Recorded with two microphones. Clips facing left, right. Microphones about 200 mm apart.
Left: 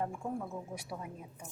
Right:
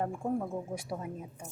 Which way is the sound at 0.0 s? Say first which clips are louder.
Right 5 dB; 40° right (ahead or behind).